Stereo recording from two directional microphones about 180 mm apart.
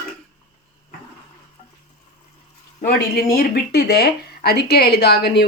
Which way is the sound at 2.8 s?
55° left (ahead or behind).